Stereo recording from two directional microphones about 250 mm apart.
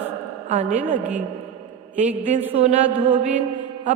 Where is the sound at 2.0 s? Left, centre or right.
Right.